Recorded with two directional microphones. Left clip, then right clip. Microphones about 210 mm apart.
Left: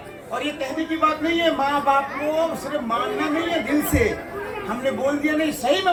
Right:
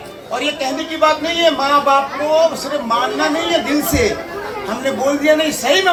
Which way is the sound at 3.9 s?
55° right (ahead or behind).